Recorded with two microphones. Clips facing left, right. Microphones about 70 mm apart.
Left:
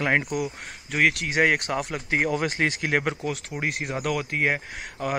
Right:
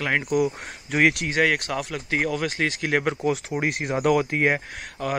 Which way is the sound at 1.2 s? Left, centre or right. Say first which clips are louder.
Even; centre.